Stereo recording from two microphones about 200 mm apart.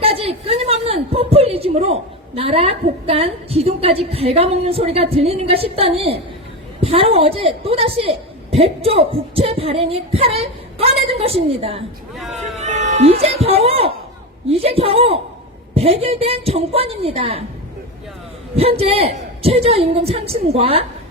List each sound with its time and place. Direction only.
0.0 s a woman's voice: 30° right (ahead or behind)
5.1 s heart murmur: 30° right (ahead or behind)
12.1 s speech: centre (ahead or behind)
12.6 s cat: 35° right (ahead or behind)
14.5 s heart murmur: 30° right (ahead or behind)
18.5 s heart murmur: 30° right (ahead or behind)